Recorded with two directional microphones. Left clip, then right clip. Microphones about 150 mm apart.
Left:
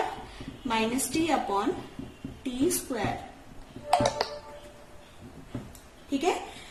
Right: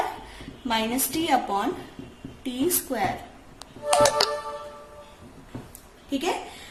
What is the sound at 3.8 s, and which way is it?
Music, 80° right.